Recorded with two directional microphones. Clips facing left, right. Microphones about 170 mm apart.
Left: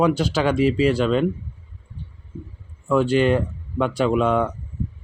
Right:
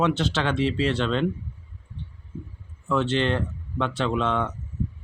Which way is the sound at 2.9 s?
10° left (ahead or behind).